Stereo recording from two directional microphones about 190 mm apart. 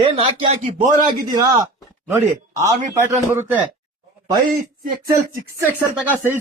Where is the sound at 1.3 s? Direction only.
20° right (ahead or behind).